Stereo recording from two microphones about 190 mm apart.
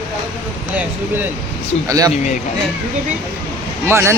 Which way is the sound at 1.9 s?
20° right (ahead or behind).